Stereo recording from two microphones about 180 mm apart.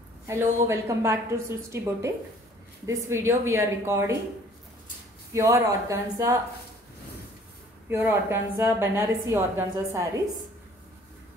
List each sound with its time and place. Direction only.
0.3 s a woman's voice: 15° right (ahead or behind)
5.3 s a woman's voice: 15° right (ahead or behind)
7.9 s a woman's voice: 15° right (ahead or behind)